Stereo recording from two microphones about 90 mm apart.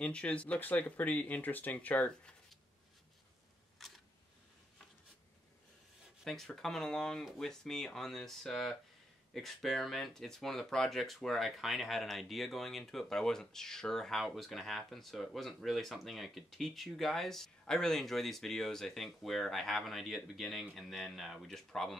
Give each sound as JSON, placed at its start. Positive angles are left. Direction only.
{"t": 0.0, "sound": "speech", "side_deg": 15}
{"t": 3.7, "sound": "camera", "side_deg": 0}
{"t": 6.2, "sound": "speech", "side_deg": 5}